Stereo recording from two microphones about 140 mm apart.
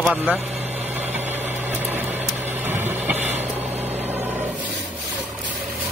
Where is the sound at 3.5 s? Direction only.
50° right (ahead or behind).